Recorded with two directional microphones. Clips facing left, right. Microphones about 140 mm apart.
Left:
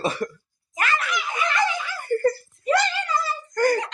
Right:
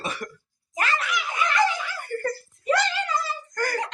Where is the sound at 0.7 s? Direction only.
30° right (ahead or behind).